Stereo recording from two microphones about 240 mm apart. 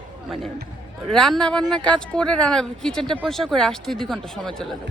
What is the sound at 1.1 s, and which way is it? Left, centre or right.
Speech, centre.